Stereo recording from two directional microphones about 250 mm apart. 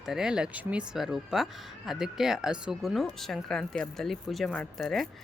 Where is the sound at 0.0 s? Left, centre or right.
Centre.